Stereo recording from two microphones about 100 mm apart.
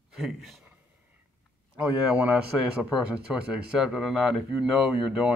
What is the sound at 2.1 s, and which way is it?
A man's voice, 10° right (ahead or behind).